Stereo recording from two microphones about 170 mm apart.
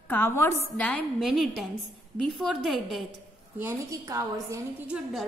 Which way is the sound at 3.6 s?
15° right (ahead or behind).